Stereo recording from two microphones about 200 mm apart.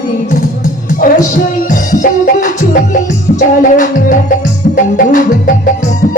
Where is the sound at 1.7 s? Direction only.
40° left (ahead or behind).